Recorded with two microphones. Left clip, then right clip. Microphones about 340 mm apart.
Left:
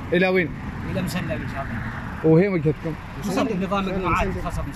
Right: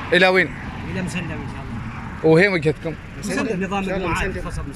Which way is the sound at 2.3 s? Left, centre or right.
Right.